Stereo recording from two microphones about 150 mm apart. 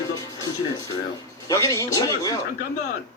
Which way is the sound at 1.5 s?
20° left (ahead or behind).